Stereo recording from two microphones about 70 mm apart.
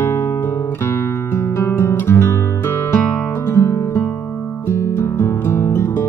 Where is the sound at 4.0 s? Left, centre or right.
Left.